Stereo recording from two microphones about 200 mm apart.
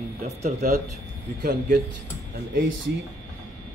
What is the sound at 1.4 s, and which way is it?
Speech, 50° right (ahead or behind).